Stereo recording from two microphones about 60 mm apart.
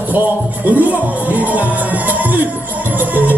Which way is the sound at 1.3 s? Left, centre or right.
Right.